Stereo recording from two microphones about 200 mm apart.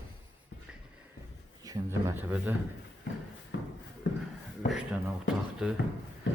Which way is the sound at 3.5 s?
60° left (ahead or behind).